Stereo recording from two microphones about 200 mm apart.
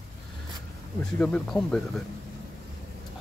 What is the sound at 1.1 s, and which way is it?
Speech, 5° left (ahead or behind).